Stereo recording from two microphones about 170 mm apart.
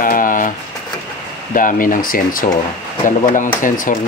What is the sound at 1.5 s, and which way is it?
Speech, 50° left (ahead or behind).